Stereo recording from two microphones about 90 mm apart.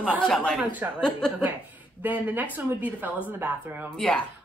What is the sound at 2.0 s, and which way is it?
Speech, 20° right (ahead or behind).